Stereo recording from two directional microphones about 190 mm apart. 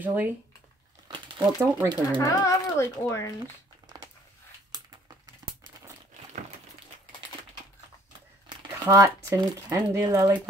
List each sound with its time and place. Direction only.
0.0 s speech: 10° right (ahead or behind)
1.6 s speech: 10° right (ahead or behind)
2.0 s speech: 20° left (ahead or behind)
4.7 s crumpling: 20° right (ahead or behind)
8.5 s speech: 20° right (ahead or behind)